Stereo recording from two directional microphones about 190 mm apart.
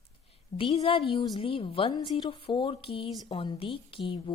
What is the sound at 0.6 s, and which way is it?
A woman's voice, 30° left (ahead or behind).